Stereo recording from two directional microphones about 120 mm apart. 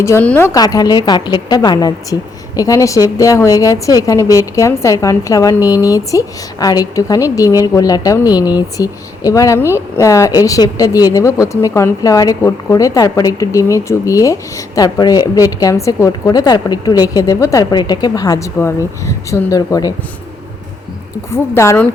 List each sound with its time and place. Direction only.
0.2 s a woman's voice: 15° left (ahead or behind)
0.5 s a woman's voice: 35° left (ahead or behind)
21.2 s a woman's voice: 20° left (ahead or behind)